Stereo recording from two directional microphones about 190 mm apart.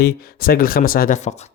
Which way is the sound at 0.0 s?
55° left (ahead or behind).